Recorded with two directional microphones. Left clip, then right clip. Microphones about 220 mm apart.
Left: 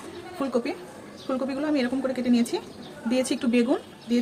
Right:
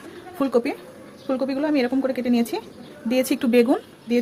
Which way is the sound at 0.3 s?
20° right (ahead or behind).